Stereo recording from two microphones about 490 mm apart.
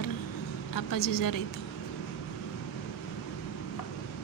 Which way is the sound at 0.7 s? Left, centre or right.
Left.